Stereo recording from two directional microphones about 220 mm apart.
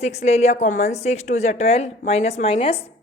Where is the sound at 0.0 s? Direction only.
30° left (ahead or behind).